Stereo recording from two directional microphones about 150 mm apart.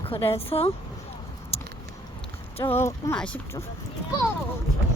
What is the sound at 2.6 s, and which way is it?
Speech, 15° left (ahead or behind).